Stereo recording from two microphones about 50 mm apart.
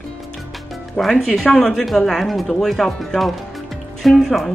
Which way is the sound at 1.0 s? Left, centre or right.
Centre.